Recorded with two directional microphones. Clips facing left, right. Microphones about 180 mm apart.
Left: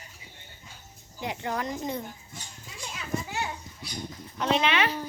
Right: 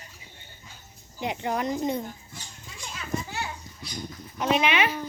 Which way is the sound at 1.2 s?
20° right (ahead or behind).